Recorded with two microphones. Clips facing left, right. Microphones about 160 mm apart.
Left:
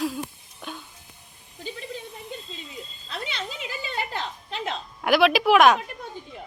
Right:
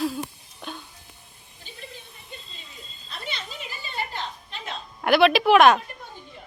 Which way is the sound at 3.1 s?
90° left.